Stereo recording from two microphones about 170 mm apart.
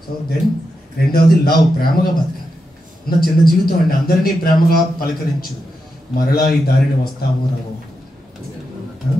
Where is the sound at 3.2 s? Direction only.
60° left (ahead or behind).